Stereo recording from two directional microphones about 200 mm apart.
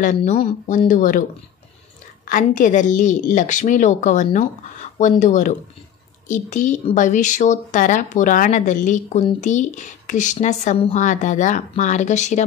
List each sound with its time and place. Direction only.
0.0 s speech: 35° left (ahead or behind)
2.2 s speech: 40° left (ahead or behind)